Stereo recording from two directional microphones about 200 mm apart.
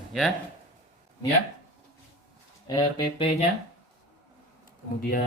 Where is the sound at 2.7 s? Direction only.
20° left (ahead or behind).